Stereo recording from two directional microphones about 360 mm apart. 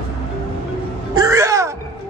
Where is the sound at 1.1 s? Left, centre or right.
Centre.